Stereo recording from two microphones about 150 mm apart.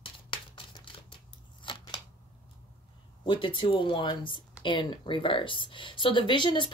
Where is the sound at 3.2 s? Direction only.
35° left (ahead or behind).